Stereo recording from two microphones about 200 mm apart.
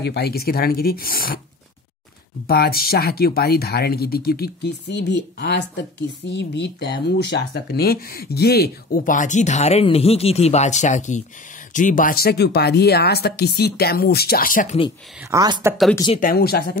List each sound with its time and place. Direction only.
0.0 s speech: 55° left (ahead or behind)
2.4 s speech: 50° left (ahead or behind)
15.2 s speech: 20° right (ahead or behind)
16.2 s speech: 45° left (ahead or behind)